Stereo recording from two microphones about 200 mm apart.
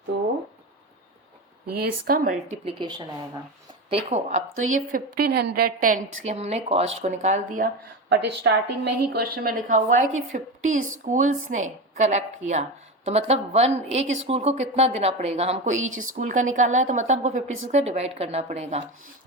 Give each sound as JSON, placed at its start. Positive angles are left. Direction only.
{"t": 1.8, "sound": "a woman's voice", "side_deg": -45}
{"t": 2.6, "sound": "a woman's voice", "side_deg": -25}
{"t": 8.1, "sound": "a woman's voice", "side_deg": -55}
{"t": 10.8, "sound": "a woman's voice", "side_deg": -90}
{"t": 11.0, "sound": "a woman's voice", "side_deg": -40}
{"t": 15.8, "sound": "a woman's voice", "side_deg": -90}
{"t": 16.1, "sound": "a woman's voice", "side_deg": -40}